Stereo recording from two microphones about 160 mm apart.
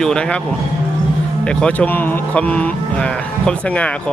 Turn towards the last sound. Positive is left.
turn(degrees=10)  # may be behind; listen again after turning